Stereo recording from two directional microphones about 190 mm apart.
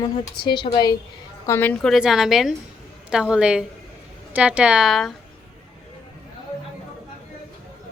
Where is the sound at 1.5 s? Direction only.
10° left (ahead or behind).